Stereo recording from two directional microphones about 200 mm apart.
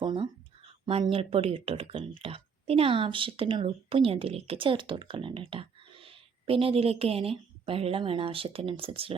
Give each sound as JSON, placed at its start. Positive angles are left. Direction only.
{"t": 0.0, "sound": "speech", "side_deg": -25}